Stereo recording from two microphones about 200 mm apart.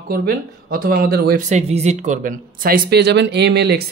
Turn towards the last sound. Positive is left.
turn(degrees=-55)  # may be behind; listen again after turning